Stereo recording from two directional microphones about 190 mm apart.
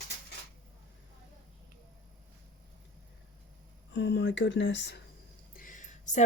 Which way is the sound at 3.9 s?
65° left (ahead or behind).